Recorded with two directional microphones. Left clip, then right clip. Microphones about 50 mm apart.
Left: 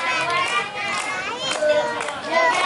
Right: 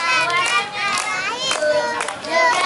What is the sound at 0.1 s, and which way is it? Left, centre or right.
Children playing, right.